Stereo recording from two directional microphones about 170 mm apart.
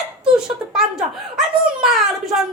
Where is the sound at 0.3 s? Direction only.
5° right (ahead or behind).